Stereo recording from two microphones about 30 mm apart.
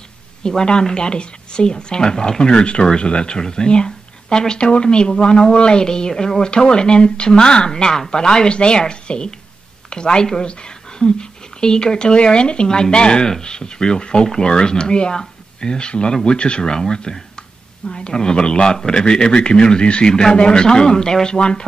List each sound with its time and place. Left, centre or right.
0.4 s speech: left
4.6 s speech: left; by 6.4 s centre
6.4 s speech: left
8.5 s speech: left
16.3 s speech: left
16.6 s speech: left
17.4 s a sound: left
18.1 s speech: left